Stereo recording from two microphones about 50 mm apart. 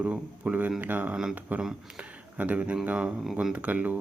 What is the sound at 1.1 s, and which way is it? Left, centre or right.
Speech, centre.